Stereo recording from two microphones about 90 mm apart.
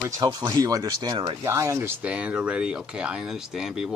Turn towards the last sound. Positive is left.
turn(degrees=-5)  # may be behind; listen again after turning